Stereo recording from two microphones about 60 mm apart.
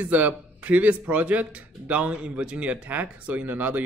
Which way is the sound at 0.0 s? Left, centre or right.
Right.